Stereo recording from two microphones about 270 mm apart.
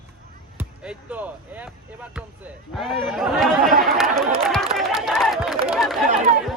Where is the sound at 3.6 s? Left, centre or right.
Right.